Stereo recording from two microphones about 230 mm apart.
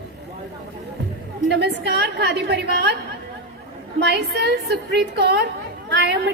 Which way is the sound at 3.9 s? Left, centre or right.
Right.